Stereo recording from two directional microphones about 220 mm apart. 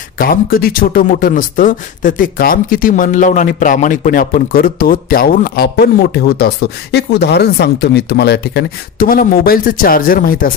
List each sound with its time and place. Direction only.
0.2 s speech: 40° left (ahead or behind)